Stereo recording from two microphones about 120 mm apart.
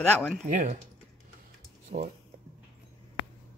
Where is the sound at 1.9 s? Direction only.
65° right (ahead or behind).